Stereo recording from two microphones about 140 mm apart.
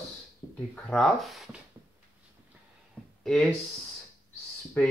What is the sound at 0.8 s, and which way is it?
Speech, centre (ahead or behind).